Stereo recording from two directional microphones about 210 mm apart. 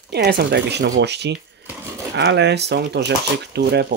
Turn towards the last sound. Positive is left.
turn(degrees=-55)  # may be behind; listen again after turning